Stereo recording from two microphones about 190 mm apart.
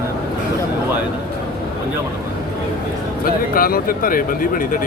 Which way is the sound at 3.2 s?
50° left (ahead or behind).